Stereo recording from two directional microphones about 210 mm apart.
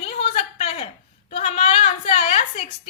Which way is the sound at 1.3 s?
30° left (ahead or behind).